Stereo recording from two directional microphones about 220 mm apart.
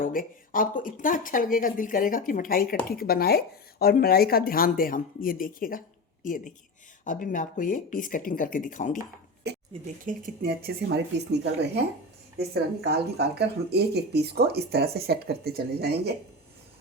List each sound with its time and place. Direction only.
0.0 s speech: 40° left (ahead or behind)
9.5 s a sound: 50° right (ahead or behind)
10.1 s speech: 40° right (ahead or behind)